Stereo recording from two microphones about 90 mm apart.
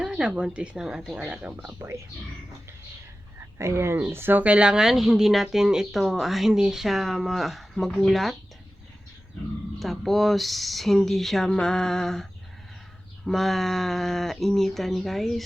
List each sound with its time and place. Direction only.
0.0 s speech: 10° right (ahead or behind)
3.6 s speech: 30° right (ahead or behind); by 8.4 s centre (ahead or behind)
9.7 s speech: centre (ahead or behind)